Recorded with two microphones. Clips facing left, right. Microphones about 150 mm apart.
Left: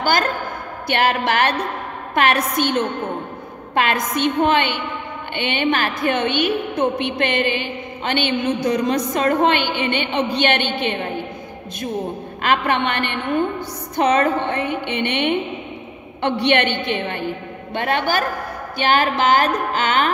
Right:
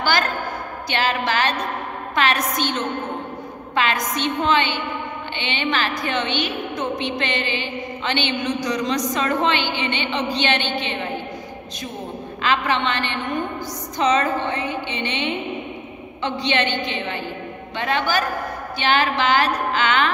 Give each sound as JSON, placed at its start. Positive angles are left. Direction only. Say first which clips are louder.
{"t": 0.0, "sound": "a sound", "louder": "left 2 dB", "side_deg": 45}
{"t": 0.8, "sound": "a woman's voice", "louder": "left 4 dB", "side_deg": 55}
{"t": 12.4, "sound": "a woman's voice", "louder": "left 2 dB", "side_deg": 55}